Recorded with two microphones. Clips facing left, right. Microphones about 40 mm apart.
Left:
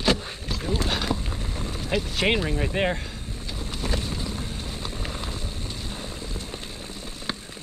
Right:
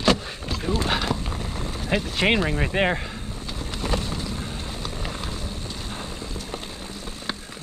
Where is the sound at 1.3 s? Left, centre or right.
Right.